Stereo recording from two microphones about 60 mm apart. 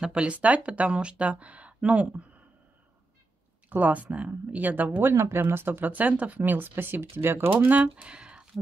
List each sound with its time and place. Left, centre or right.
0.0 s speech: centre
3.6 s speech: right
5.0 s speech: right
7.5 s speech: right